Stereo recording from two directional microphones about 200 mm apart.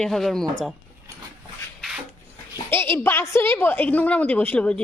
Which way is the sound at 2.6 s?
10° left (ahead or behind).